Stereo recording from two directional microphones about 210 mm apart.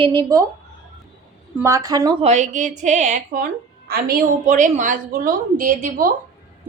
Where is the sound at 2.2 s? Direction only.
35° right (ahead or behind).